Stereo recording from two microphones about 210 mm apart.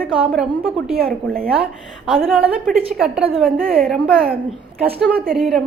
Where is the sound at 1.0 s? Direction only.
45° right (ahead or behind).